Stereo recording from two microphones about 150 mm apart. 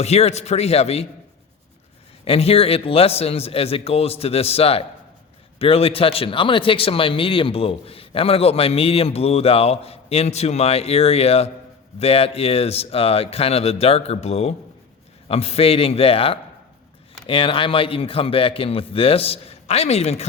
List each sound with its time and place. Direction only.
0.0 s speech: 45° left (ahead or behind)
2.2 s speech: 40° left (ahead or behind)